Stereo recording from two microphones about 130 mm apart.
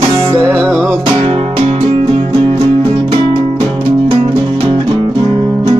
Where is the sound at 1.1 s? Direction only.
50° right (ahead or behind).